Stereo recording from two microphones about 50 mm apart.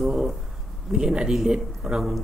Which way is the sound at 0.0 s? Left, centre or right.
Centre.